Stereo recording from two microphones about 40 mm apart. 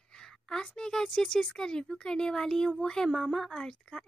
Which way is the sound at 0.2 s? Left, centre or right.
Centre.